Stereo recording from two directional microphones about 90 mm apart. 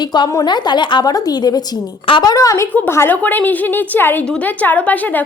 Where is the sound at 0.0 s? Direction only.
55° left (ahead or behind); by 2.6 s 40° left (ahead or behind).